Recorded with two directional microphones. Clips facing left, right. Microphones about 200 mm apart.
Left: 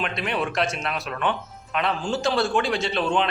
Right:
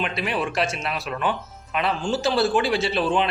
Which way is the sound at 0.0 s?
5° right (ahead or behind).